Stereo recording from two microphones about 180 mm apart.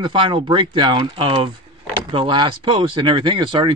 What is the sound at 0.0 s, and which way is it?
Speech, 25° right (ahead or behind).